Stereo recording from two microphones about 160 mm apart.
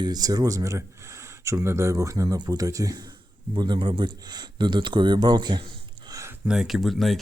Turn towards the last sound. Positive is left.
turn(degrees=0)  # may be behind; listen again after turning